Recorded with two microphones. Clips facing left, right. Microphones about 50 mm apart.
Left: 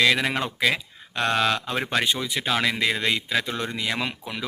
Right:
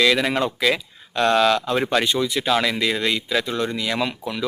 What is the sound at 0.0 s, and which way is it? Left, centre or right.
Speech, centre.